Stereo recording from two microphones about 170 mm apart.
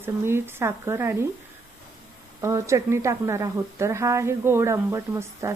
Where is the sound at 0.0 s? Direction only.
15° right (ahead or behind).